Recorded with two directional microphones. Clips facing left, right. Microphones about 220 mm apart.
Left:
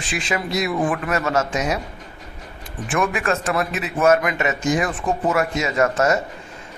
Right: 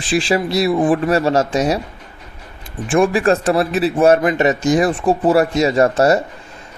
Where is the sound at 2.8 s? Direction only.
30° right (ahead or behind).